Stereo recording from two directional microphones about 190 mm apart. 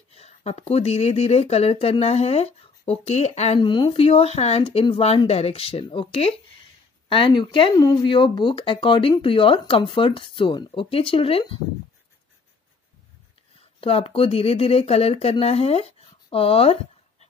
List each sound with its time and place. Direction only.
0.1 s speech: 35° left (ahead or behind)
13.7 s speech: 30° left (ahead or behind)